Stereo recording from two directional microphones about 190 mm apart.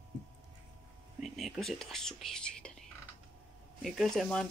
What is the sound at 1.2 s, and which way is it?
Speech, centre (ahead or behind).